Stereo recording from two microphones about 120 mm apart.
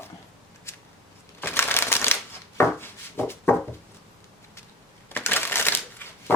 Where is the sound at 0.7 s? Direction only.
20° left (ahead or behind).